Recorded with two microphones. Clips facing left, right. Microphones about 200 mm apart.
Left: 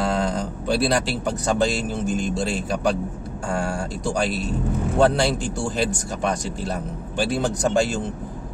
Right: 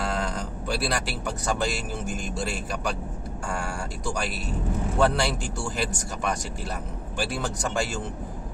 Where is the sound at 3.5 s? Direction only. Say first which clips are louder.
Left 7 dB; 30° left (ahead or behind).